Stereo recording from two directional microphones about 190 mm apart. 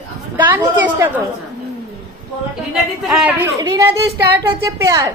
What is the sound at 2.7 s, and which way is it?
Speech, centre (ahead or behind).